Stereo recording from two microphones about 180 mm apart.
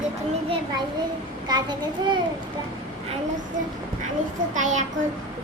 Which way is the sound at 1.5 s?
25° right (ahead or behind).